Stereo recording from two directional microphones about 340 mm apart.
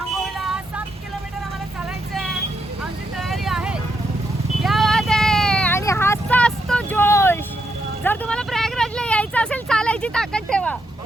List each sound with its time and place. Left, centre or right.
0.3 s vehicle: centre
2.1 s vehicle: centre